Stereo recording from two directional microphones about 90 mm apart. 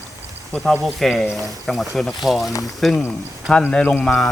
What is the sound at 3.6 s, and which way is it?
Speech, 15° left (ahead or behind).